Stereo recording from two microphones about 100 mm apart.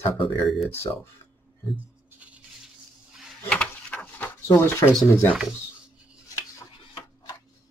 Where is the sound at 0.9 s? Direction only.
40° left (ahead or behind).